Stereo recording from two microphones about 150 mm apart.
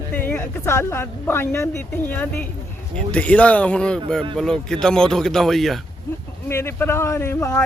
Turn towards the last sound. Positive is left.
turn(degrees=20)  # may be behind; listen again after turning